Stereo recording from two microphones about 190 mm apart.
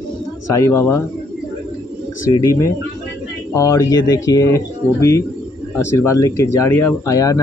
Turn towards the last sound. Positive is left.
turn(degrees=20)  # may be behind; listen again after turning